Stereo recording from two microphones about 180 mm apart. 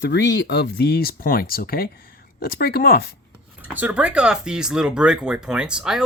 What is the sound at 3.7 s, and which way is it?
Speech, 5° right (ahead or behind).